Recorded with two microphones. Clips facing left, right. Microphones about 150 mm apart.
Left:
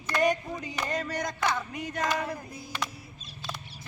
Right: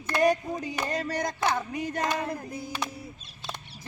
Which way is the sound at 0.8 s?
35° right (ahead or behind).